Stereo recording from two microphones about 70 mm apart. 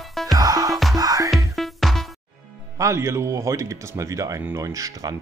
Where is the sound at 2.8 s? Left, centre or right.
Right.